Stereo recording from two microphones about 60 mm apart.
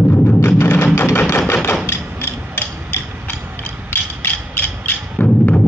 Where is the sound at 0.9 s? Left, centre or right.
Left.